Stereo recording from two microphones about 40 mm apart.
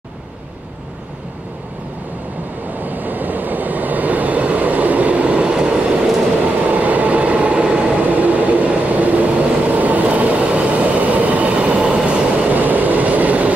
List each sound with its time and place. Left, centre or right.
2.8 s train: right
6.7 s train: right